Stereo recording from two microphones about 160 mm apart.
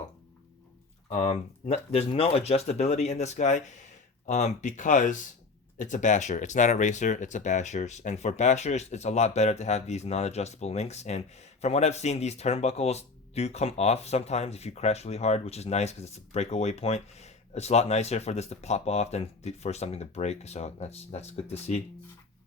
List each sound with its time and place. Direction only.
1.1 s speech: 40° left (ahead or behind)